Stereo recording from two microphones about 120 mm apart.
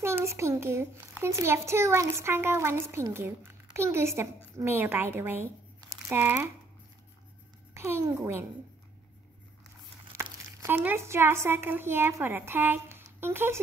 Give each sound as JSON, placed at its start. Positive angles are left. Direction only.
{"t": 0.0, "sound": "a child's voice", "side_deg": -20}
{"t": 7.7, "sound": "a child's voice", "side_deg": -20}
{"t": 10.6, "sound": "a child's voice", "side_deg": -20}